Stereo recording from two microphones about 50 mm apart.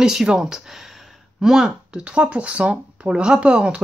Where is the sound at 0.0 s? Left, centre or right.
Centre.